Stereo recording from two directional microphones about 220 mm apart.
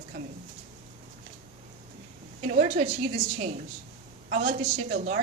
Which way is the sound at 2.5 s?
35° right (ahead or behind).